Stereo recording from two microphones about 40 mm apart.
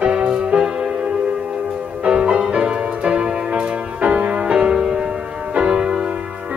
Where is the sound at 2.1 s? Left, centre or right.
Right.